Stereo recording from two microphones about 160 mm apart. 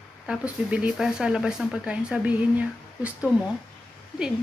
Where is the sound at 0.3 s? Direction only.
5° right (ahead or behind).